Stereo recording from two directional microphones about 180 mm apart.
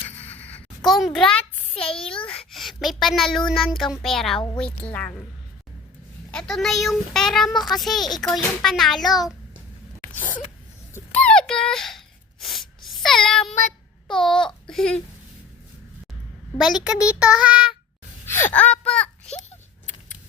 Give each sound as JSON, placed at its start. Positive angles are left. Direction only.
{"t": 0.1, "sound": "a sound", "side_deg": 10}
{"t": 2.0, "sound": "a child's voice", "side_deg": 30}
{"t": 2.5, "sound": "a child's voice", "side_deg": 0}
{"t": 6.3, "sound": "a child's voice", "side_deg": 5}
{"t": 10.9, "sound": "a sound", "side_deg": 5}
{"t": 13.5, "sound": "child singing", "side_deg": 45}
{"t": 14.1, "sound": "babbling", "side_deg": 5}
{"t": 14.7, "sound": "speech", "side_deg": 5}
{"t": 16.6, "sound": "a child's voice", "side_deg": 0}
{"t": 18.3, "sound": "a child's voice", "side_deg": 15}